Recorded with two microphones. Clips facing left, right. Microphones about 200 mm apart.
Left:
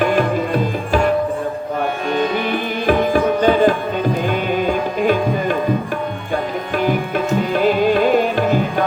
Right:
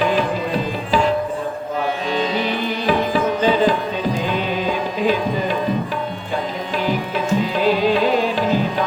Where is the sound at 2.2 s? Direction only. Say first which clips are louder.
Left 3 dB; 50° left (ahead or behind).